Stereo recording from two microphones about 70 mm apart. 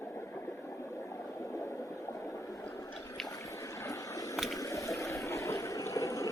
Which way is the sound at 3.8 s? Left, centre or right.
Left.